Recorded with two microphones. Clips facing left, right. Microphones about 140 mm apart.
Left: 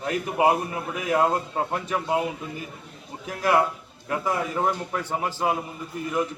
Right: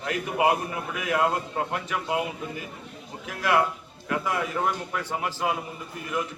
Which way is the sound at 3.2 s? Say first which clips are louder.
Left 2 dB; 40° left (ahead or behind).